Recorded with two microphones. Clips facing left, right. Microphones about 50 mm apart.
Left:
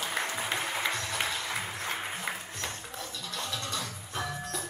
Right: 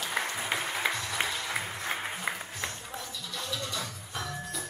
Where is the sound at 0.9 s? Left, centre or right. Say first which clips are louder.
Even; centre.